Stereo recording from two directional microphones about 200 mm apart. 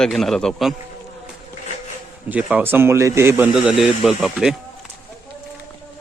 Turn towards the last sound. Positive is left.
turn(degrees=0)  # may be behind; listen again after turning